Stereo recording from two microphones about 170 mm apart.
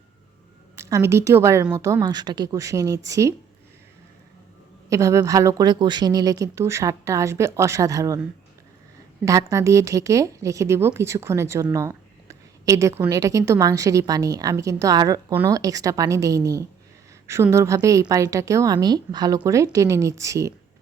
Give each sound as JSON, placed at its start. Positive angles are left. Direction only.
{"t": 0.8, "sound": "a woman's voice", "side_deg": -20}
{"t": 4.9, "sound": "a woman's voice", "side_deg": -20}
{"t": 9.2, "sound": "a woman's voice", "side_deg": -20}